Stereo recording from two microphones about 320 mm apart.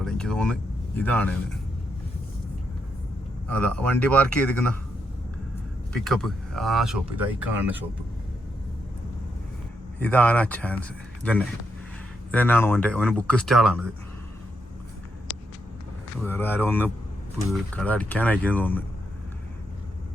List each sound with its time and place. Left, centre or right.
0.0 s speech: centre
3.5 s speech: centre
5.9 s speech: centre
10.0 s speech: centre
15.3 s vehicle: right
16.2 s speech: centre